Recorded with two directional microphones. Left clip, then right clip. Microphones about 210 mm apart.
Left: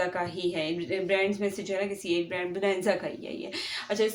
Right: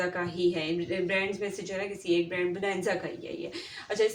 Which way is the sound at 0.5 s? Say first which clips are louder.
Left 1 dB; 50° left (ahead or behind).